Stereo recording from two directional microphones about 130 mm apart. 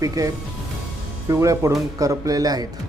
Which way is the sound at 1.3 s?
25° right (ahead or behind).